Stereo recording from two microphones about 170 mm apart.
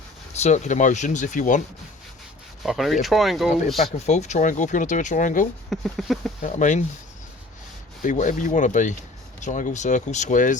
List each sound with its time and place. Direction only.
0.3 s speech: 40° left (ahead or behind)
2.6 s speech: centre (ahead or behind)
3.9 s speech: 40° left (ahead or behind)
5.7 s speech: centre (ahead or behind)
6.4 s speech: 45° left (ahead or behind)
8.0 s speech: 45° left (ahead or behind)